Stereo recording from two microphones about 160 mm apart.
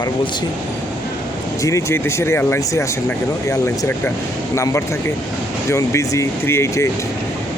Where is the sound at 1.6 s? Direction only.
20° left (ahead or behind).